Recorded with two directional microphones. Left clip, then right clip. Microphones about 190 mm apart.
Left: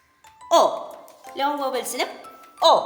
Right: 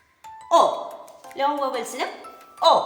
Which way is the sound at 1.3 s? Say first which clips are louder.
Even; 55° left (ahead or behind).